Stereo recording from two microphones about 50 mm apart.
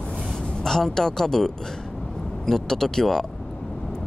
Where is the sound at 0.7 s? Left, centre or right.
Centre.